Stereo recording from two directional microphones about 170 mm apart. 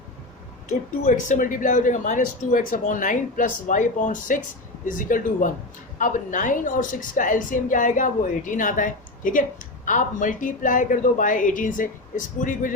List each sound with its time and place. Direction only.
0.7 s speech: 45° left (ahead or behind)